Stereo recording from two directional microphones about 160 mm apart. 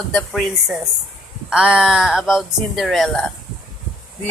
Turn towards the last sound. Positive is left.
turn(degrees=5)  # may be behind; listen again after turning